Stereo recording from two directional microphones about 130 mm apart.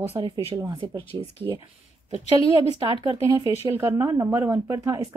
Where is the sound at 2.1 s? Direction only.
45° left (ahead or behind).